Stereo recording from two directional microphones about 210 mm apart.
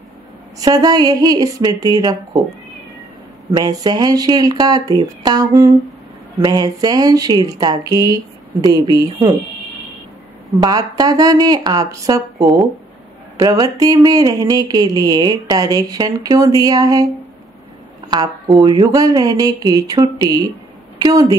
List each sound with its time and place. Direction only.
0.6 s speech: 15° right (ahead or behind)
3.5 s speech: 20° right (ahead or behind)
10.6 s speech: 15° right (ahead or behind)
18.1 s speech: 15° right (ahead or behind)